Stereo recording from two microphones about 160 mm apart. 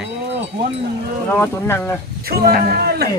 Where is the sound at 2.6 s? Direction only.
75° right (ahead or behind).